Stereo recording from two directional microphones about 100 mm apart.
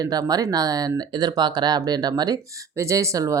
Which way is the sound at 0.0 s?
40° right (ahead or behind).